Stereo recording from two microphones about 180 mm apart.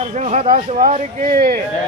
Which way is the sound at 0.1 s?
40° right (ahead or behind).